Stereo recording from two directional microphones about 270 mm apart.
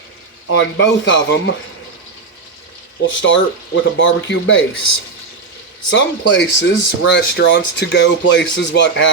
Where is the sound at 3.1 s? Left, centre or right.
Left.